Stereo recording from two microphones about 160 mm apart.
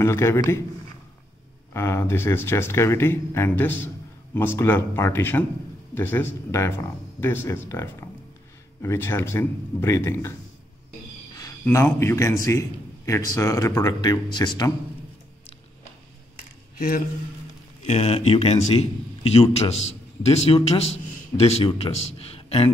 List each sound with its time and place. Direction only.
0.0 s speech: 15° left (ahead or behind)
1.7 s speech: 15° left (ahead or behind)
11.6 s speech: 15° left (ahead or behind)
16.7 s speech: 60° left (ahead or behind)
17.8 s a man's voice: 40° left (ahead or behind)